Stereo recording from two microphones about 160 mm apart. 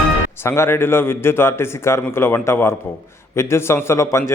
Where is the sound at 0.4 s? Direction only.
15° left (ahead or behind).